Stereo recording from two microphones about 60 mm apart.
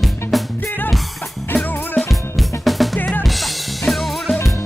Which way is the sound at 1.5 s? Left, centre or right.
Left.